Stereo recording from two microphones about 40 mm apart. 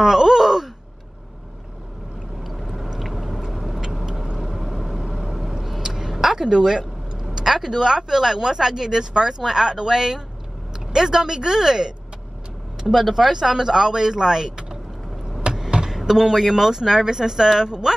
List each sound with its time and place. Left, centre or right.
0.0 s groan: centre
2.4 s vehicle: centre
4.7 s a sound: centre
10.9 s speech: centre
12.8 s speech: centre
15.5 s a sound: right
15.9 s speech: centre